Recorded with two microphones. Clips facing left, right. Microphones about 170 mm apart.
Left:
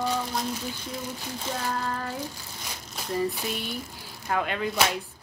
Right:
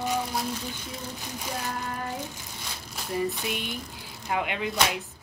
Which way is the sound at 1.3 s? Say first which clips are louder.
Left 3 dB; 15° right (ahead or behind).